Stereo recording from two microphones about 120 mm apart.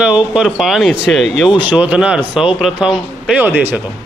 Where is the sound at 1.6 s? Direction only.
10° right (ahead or behind).